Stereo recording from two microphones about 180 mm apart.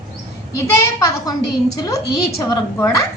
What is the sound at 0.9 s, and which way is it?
A woman's voice, 20° left (ahead or behind).